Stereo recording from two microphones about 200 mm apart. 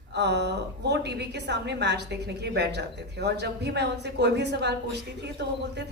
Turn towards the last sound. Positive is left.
turn(degrees=-60)  # may be behind; listen again after turning